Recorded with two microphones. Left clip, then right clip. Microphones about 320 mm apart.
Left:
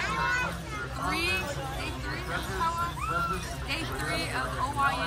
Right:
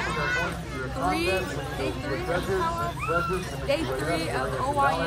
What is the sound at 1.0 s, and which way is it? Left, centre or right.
Speech, centre.